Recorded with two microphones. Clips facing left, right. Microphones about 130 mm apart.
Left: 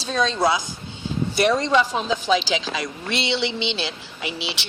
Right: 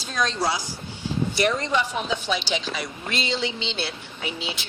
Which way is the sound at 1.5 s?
90° left.